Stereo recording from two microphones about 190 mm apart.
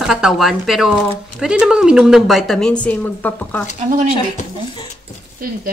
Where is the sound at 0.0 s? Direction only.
Centre (ahead or behind).